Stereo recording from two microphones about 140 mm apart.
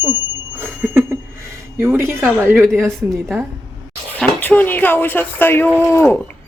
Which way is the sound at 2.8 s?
5° left (ahead or behind).